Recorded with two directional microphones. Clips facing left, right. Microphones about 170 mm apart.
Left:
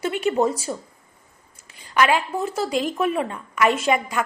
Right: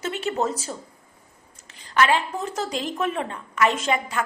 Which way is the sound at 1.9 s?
10° left (ahead or behind).